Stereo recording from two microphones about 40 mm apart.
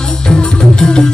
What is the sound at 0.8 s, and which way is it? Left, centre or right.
Music, centre.